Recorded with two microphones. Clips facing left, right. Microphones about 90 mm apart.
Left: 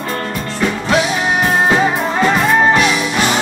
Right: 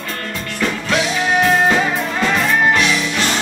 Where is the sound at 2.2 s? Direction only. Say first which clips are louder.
Left 3 dB; 35° left (ahead or behind).